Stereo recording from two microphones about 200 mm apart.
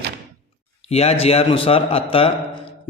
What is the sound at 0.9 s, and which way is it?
A man's voice, 30° left (ahead or behind).